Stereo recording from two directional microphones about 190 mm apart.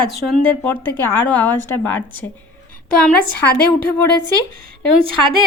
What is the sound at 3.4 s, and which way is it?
Speech, 55° left (ahead or behind).